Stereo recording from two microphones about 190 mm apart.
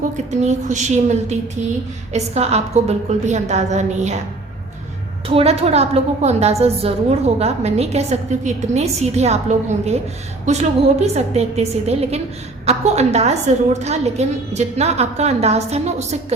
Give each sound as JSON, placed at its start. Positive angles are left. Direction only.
{"t": 0.3, "sound": "a woman's voice", "side_deg": -35}
{"t": 5.3, "sound": "a woman's voice", "side_deg": -30}